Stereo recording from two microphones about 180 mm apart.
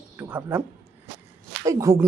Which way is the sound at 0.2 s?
10° right (ahead or behind).